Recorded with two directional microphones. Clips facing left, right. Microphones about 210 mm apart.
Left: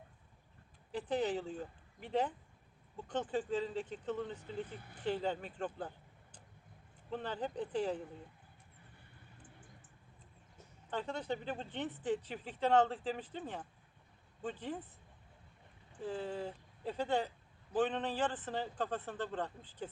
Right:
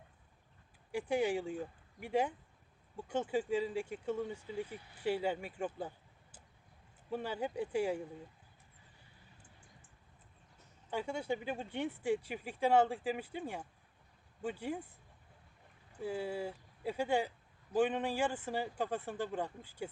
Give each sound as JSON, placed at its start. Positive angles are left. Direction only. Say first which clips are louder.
{"t": 0.9, "sound": "speech", "louder": "right 2 dB", "side_deg": -10}
{"t": 4.8, "sound": "speech", "louder": "left 5 dB", "side_deg": 50}
{"t": 5.0, "sound": "speech", "louder": "right 2 dB", "side_deg": -10}
{"t": 7.1, "sound": "speech", "louder": "right 2 dB", "side_deg": -10}
{"t": 10.9, "sound": "speech", "louder": "right 2 dB", "side_deg": -10}
{"t": 16.0, "sound": "speech", "louder": "right 2 dB", "side_deg": -10}